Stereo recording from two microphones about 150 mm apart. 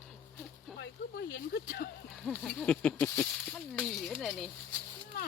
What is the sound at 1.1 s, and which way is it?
Speech, 90° left.